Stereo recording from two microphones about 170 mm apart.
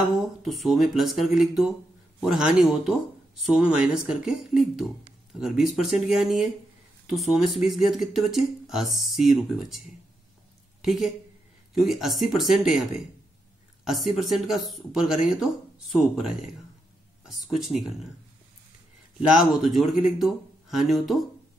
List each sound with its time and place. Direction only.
0.1 s speech: centre (ahead or behind)
10.8 s a woman's voice: centre (ahead or behind)
19.2 s speech: centre (ahead or behind)